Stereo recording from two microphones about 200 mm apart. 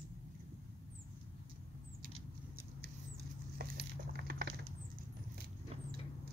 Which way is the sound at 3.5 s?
50° right (ahead or behind).